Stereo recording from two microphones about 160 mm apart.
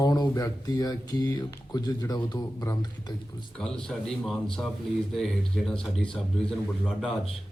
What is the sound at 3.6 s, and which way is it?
A man's voice, 5° left (ahead or behind).